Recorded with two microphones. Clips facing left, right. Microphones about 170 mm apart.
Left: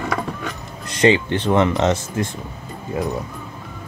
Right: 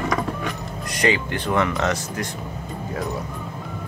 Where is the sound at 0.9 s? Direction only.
25° left (ahead or behind).